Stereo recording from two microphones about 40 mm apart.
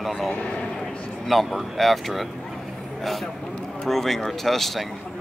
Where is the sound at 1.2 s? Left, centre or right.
Centre.